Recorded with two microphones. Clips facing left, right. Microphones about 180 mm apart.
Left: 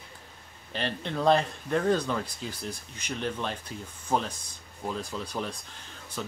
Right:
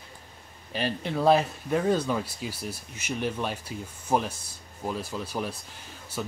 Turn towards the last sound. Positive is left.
turn(degrees=-10)  # may be behind; listen again after turning